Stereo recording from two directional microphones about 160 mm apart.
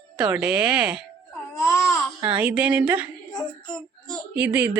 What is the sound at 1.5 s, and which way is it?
Baby cry, 15° left (ahead or behind).